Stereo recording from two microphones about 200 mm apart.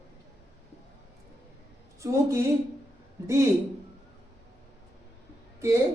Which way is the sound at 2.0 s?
15° right (ahead or behind).